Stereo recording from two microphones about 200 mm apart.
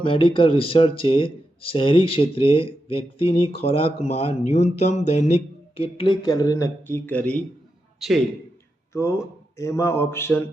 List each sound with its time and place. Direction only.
0.0 s a man's voice: 25° left (ahead or behind); by 8.2 s centre (ahead or behind)
8.9 s speech: 15° left (ahead or behind)